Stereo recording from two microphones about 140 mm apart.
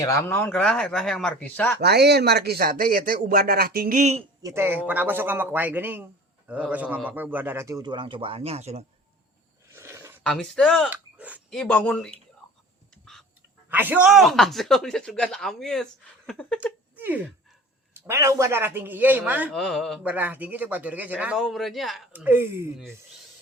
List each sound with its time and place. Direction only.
0.0 s speech: 20° left (ahead or behind)
0.5 s speech: 5° left (ahead or behind)
2.6 s speech: 90° right
4.4 s speech: 15° right (ahead or behind); by 8.8 s 50° right (ahead or behind)
9.7 s a sound: 20° right (ahead or behind)
10.2 s speech: 5° left (ahead or behind)
10.8 s speech: 10° right (ahead or behind)
11.5 s speech: 5° left (ahead or behind)
13.7 s speech: 15° right (ahead or behind); by 16.6 s 5° left (ahead or behind)
18.0 s speech: 20° right (ahead or behind)
19.5 s speech: 5° left (ahead or behind)
20.1 s speech: 10° right (ahead or behind)
22.1 s speech: 15° right (ahead or behind)